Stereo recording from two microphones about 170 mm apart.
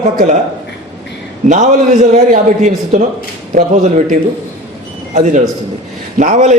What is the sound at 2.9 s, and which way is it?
Speech, 45° right (ahead or behind).